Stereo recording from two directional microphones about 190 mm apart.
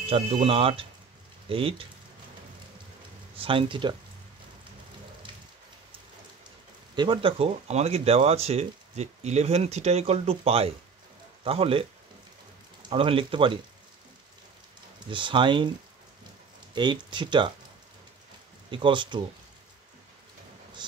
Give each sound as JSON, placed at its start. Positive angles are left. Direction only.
{"t": 0.0, "sound": "speech", "side_deg": -30}
{"t": 3.3, "sound": "speech", "side_deg": -30}
{"t": 7.0, "sound": "speech", "side_deg": -25}
{"t": 12.9, "sound": "speech", "side_deg": -30}
{"t": 15.0, "sound": "speech", "side_deg": -25}
{"t": 16.7, "sound": "speech", "side_deg": -25}
{"t": 18.7, "sound": "speech", "side_deg": -25}